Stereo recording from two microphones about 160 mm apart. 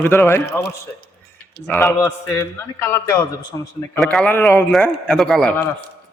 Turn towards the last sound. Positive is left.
turn(degrees=5)  # may be behind; listen again after turning